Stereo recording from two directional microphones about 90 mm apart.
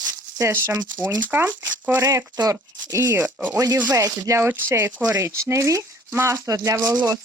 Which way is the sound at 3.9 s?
35° right (ahead or behind).